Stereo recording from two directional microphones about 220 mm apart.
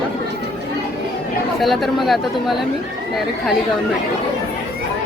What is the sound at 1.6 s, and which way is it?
Speech, centre (ahead or behind).